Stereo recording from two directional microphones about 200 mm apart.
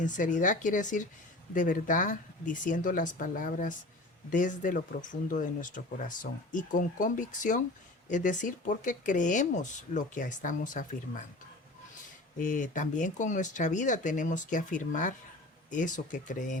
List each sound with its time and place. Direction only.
0.0 s speech: 40° left (ahead or behind)
12.4 s speech: 40° left (ahead or behind)